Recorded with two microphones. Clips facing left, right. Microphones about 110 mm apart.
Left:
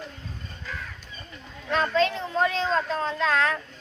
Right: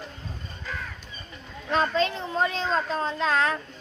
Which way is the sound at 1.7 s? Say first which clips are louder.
Left 1 dB; 25° right (ahead or behind).